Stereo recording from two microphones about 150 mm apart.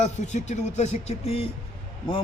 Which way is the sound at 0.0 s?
50° left (ahead or behind).